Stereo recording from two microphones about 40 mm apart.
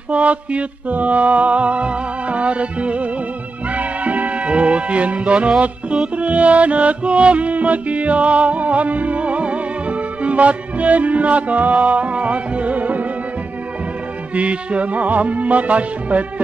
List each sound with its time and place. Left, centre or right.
0.1 s music: right
14.3 s music: right